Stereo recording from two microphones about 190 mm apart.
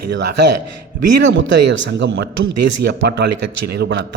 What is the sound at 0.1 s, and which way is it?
A man's voice, 65° right (ahead or behind).